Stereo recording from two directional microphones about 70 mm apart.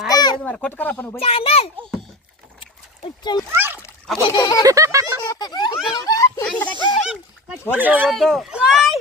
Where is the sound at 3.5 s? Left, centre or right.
Right.